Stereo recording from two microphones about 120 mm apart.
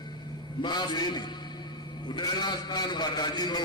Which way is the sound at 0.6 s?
40° left (ahead or behind).